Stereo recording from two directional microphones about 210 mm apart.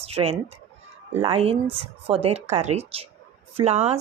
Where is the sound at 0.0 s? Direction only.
30° right (ahead or behind).